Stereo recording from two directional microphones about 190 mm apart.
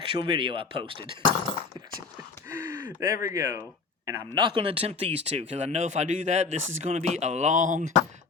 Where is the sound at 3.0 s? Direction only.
15° right (ahead or behind); by 7.9 s 40° right (ahead or behind).